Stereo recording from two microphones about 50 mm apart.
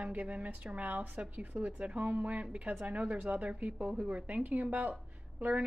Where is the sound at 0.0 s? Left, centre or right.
Right.